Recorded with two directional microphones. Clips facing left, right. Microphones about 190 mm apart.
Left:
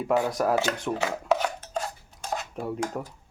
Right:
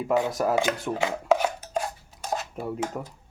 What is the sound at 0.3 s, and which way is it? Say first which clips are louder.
Speech: even; centre (ahead or behind).